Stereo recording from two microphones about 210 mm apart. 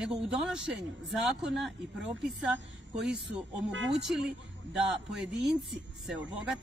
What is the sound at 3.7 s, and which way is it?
Speech, 60° right (ahead or behind).